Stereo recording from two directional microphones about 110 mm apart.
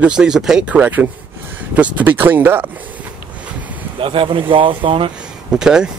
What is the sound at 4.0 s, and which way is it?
Speech, 55° right (ahead or behind).